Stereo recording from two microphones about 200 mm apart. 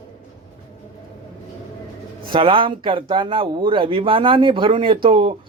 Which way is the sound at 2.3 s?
25° right (ahead or behind).